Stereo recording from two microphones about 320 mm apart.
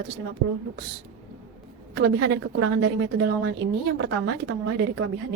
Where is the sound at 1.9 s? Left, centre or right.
Right.